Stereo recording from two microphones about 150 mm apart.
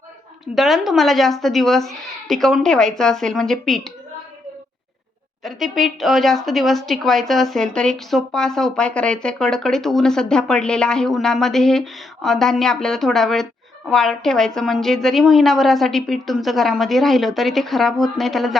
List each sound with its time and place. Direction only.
0.5 s speech: centre (ahead or behind)
5.4 s speech: centre (ahead or behind)